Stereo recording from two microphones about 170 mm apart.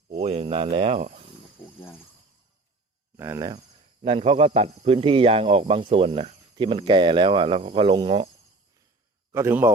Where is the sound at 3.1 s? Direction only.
15° right (ahead or behind).